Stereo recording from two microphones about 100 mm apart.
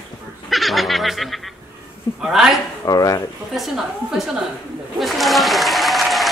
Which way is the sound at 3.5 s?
Centre (ahead or behind).